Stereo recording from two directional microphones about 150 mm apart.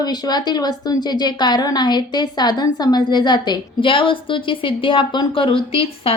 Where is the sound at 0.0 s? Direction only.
30° left (ahead or behind).